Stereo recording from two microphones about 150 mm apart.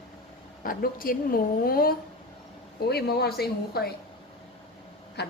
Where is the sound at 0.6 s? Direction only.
70° left (ahead or behind).